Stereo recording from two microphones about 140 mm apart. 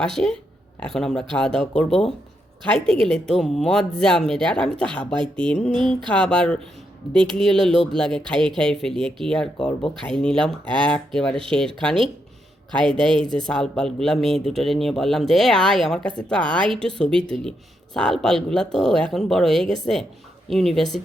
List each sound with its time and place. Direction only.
0.0 s speech: 5° left (ahead or behind)
13.1 s speech: 35° right (ahead or behind)
13.4 s speech: 5° left (ahead or behind)